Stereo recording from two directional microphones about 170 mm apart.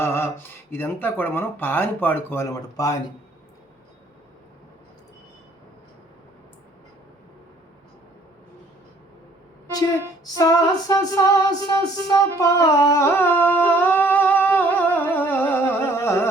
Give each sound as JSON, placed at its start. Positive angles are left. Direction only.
{"t": 0.0, "sound": "a sound", "side_deg": 15}
{"t": 0.7, "sound": "speech", "side_deg": 10}
{"t": 10.3, "sound": "female singing", "side_deg": 20}
{"t": 12.0, "sound": "humming", "side_deg": 20}